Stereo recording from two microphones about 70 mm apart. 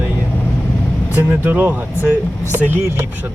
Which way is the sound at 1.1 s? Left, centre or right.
Right.